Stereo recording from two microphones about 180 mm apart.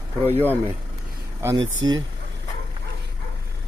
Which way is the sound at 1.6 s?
90° right.